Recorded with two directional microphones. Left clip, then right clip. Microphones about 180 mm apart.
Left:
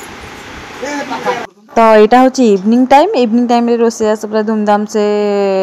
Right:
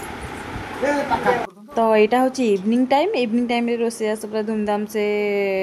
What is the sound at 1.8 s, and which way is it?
A woman's voice, 20° left (ahead or behind).